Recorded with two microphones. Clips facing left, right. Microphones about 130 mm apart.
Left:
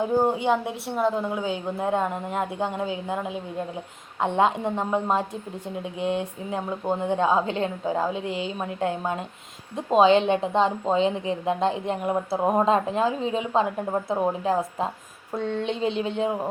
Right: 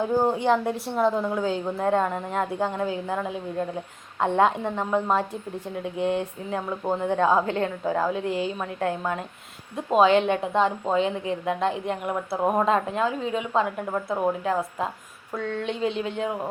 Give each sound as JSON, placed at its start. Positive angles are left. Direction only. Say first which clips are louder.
{"t": 0.0, "sound": "a woman's voice", "louder": "even", "side_deg": 15}